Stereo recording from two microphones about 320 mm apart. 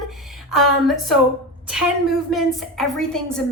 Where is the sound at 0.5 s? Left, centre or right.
Centre.